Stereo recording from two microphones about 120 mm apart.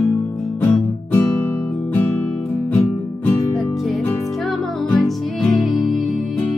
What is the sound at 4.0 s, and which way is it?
Music, 20° left (ahead or behind).